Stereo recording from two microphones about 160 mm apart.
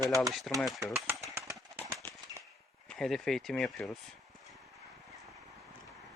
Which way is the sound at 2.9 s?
Centre (ahead or behind).